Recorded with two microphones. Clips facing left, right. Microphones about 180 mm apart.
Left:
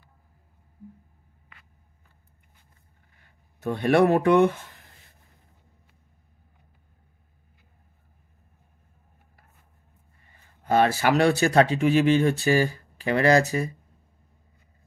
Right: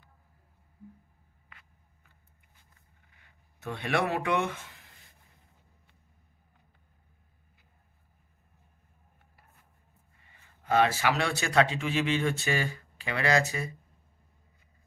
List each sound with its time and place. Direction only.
3.6 s speech: 40° left (ahead or behind)
10.6 s speech: 45° left (ahead or behind)